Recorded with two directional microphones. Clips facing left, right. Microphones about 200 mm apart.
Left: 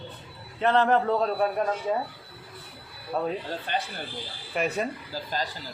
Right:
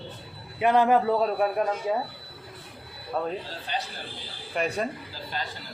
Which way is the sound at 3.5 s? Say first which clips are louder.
Left 3 dB; 55° left (ahead or behind).